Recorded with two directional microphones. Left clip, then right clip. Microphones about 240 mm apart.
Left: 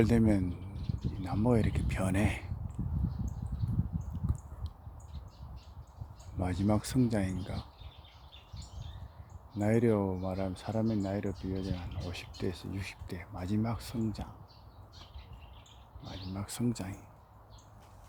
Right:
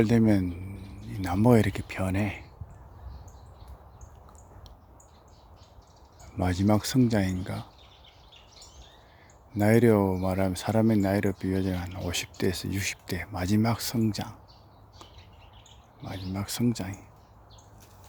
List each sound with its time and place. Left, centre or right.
0.0 s speech: centre
1.9 s speech: centre
4.1 s a sound: centre
6.3 s speech: centre
9.6 s speech: right
16.3 s speech: centre